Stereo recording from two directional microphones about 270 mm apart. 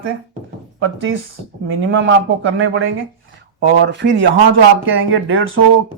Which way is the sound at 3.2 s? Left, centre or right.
Right.